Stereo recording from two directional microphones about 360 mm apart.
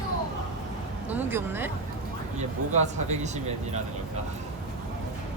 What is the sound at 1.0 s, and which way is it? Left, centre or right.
Speech, centre.